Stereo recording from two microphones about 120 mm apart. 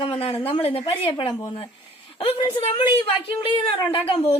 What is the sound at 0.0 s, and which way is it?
A woman's voice, 50° left (ahead or behind).